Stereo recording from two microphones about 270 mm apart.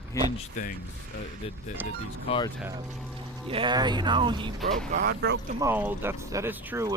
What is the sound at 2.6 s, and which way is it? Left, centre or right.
Speech, centre.